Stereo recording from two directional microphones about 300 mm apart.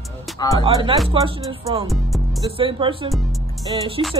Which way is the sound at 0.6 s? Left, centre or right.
Centre.